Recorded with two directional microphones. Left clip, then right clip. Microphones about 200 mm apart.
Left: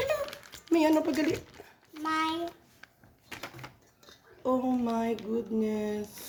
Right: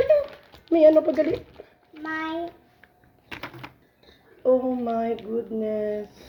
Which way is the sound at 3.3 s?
40° right (ahead or behind).